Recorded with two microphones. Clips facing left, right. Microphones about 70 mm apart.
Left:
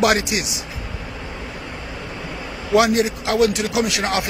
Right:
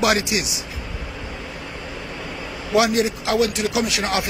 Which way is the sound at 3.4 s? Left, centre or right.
Left.